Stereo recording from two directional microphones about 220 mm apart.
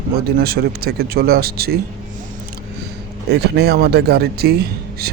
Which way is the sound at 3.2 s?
50° right (ahead or behind).